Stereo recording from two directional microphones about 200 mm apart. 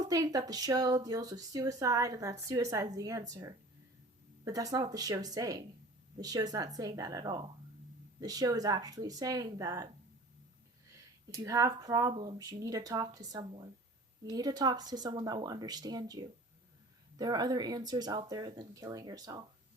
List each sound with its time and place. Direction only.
0.1 s speech: 20° right (ahead or behind)
11.4 s speech: 15° right (ahead or behind)